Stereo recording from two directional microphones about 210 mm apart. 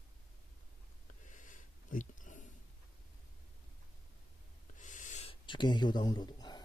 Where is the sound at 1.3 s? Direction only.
40° left (ahead or behind).